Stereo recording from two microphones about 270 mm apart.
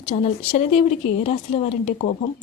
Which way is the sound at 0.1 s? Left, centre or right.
Left.